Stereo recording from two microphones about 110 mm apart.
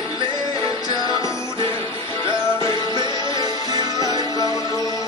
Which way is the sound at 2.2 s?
35° left (ahead or behind).